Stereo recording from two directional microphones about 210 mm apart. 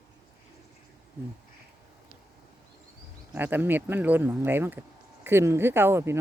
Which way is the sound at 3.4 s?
10° right (ahead or behind).